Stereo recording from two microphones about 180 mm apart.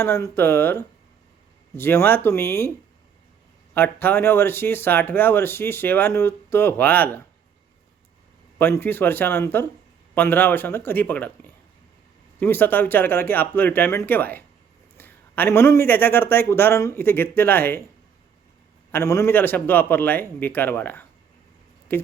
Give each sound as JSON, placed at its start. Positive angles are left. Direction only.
{"t": 0.0, "sound": "speech", "side_deg": 15}
{"t": 3.8, "sound": "speech", "side_deg": 10}
{"t": 8.5, "sound": "speech", "side_deg": 10}
{"t": 18.9, "sound": "speech", "side_deg": 15}